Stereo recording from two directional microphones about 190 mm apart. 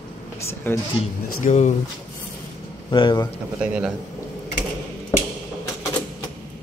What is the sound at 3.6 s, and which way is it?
Speech, 5° right (ahead or behind).